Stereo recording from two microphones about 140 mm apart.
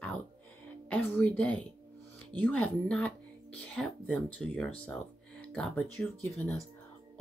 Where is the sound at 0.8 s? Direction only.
10° left (ahead or behind).